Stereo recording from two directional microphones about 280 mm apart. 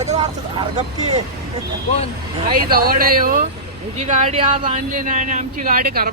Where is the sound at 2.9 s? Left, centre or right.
Right.